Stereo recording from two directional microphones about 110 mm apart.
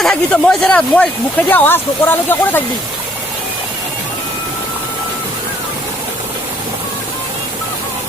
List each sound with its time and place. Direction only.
0.0 s speech: 10° left (ahead or behind)